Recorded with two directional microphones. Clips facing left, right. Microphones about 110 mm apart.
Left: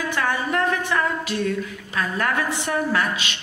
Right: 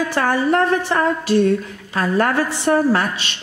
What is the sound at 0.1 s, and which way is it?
A woman's voice, 35° right (ahead or behind).